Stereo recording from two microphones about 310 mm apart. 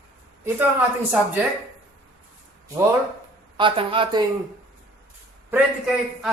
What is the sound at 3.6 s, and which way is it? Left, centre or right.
Speech, centre.